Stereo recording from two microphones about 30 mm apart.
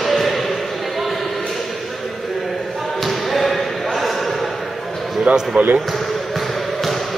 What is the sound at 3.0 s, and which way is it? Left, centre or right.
Basketball bounce, centre.